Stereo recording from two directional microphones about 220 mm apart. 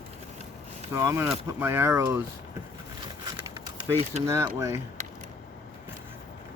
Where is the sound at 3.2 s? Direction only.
25° right (ahead or behind).